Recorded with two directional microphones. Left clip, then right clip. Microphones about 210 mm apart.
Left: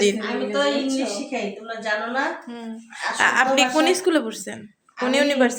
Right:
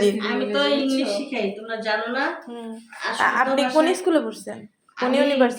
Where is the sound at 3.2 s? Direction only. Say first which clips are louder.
Left 2 dB; 30° left (ahead or behind).